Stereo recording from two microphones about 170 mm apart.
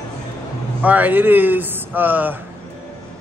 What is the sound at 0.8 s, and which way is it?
Speech, 10° right (ahead or behind).